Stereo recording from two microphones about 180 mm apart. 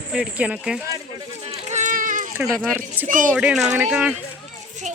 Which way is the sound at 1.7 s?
40° right (ahead or behind).